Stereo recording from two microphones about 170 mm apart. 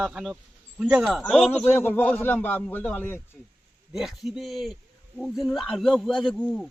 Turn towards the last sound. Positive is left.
turn(degrees=5)  # may be behind; listen again after turning